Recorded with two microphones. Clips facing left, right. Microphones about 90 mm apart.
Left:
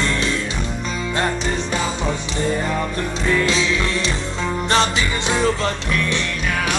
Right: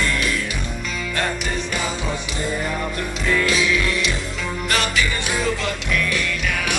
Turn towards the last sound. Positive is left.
turn(degrees=35)  # may be behind; listen again after turning